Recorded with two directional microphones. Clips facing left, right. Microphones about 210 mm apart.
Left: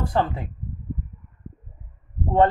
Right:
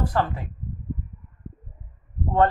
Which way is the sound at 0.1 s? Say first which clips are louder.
Left 2 dB; 25° left (ahead or behind).